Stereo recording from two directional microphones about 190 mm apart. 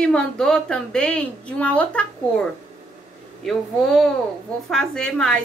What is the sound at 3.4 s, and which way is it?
A woman's voice, centre (ahead or behind).